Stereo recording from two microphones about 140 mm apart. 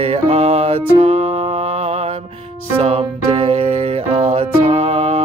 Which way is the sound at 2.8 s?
45° right (ahead or behind).